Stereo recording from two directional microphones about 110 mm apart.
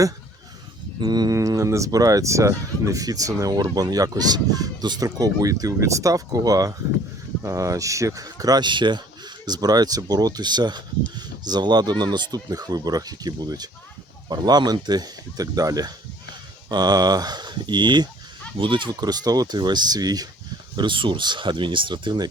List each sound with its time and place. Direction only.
0.9 s speech: 40° right (ahead or behind)
20.7 s speech: 50° right (ahead or behind)